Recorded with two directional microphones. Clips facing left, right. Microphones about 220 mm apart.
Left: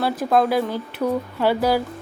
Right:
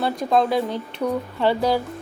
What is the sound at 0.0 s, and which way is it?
Speech, centre (ahead or behind).